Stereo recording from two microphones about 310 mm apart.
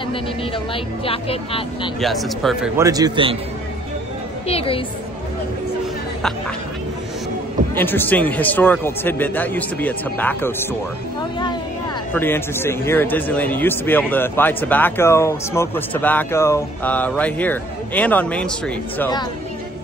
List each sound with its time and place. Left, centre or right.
1.0 s a man's voice: centre
2.0 s a man's voice: centre
2.8 s a man's voice: centre
4.5 s a man's voice: centre
7.7 s a man's voice: centre
12.1 s a man's voice: centre